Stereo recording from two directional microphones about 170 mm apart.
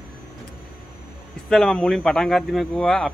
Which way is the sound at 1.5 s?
5° left (ahead or behind).